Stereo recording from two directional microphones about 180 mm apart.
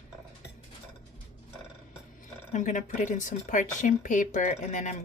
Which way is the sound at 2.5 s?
45° left (ahead or behind).